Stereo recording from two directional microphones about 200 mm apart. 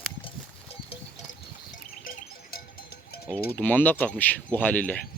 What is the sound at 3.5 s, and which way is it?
Speech, 10° left (ahead or behind).